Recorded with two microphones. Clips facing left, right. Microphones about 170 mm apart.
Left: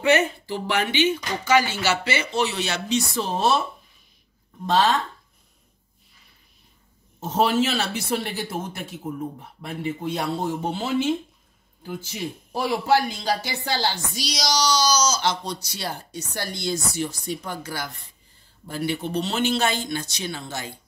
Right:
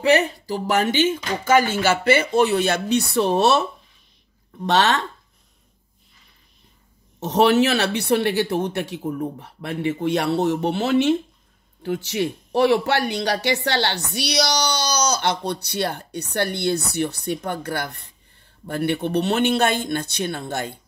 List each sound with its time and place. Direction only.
0.0 s speech: 35° right (ahead or behind); by 3.6 s 70° right (ahead or behind)
4.6 s speech: 75° right (ahead or behind)
7.2 s speech: 75° right (ahead or behind); by 20.8 s 55° right (ahead or behind)